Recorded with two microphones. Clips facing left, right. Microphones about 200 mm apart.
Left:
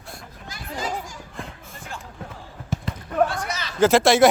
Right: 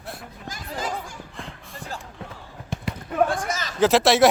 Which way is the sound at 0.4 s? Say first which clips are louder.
Even; 45° right (ahead or behind).